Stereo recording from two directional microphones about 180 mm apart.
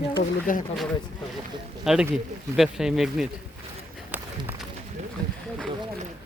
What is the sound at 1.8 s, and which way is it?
Speech, 5° right (ahead or behind).